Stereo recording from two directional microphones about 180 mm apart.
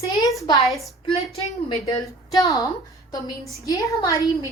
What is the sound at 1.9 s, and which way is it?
Speech, 20° left (ahead or behind).